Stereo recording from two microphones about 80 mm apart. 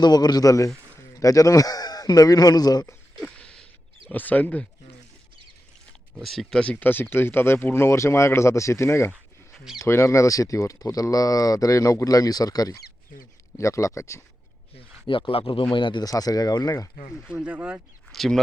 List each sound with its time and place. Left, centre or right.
0.0 s a man's voice: left
3.2 s a sound: centre
4.1 s speech: left
6.1 s speech: centre
6.6 s speech: centre; by 14.2 s left
15.0 s speech: left
16.0 s speech: left
17.2 s speech: centre
18.1 s a sound: centre